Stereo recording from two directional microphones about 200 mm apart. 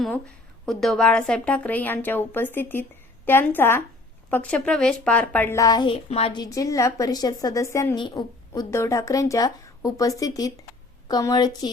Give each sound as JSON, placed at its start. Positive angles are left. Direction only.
{"t": 0.6, "sound": "a woman's voice", "side_deg": 0}